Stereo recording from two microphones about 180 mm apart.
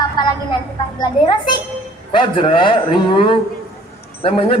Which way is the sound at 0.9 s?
25° left (ahead or behind).